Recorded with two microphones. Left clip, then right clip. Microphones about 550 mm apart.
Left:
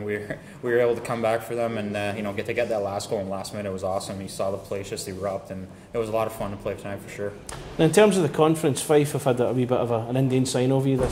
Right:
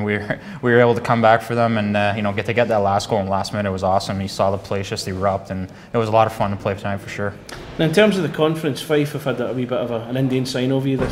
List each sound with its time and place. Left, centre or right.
0.0 s speech: right
7.8 s speech: left